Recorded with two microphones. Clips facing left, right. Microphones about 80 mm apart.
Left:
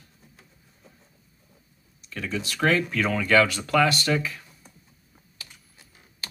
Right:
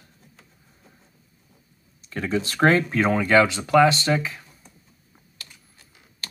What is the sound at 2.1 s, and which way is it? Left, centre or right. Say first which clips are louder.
Speech: right 6 dB; right.